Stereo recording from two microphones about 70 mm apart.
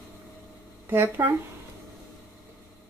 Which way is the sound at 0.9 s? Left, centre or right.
Right.